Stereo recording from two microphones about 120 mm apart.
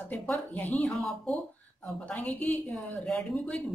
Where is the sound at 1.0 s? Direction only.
Centre (ahead or behind).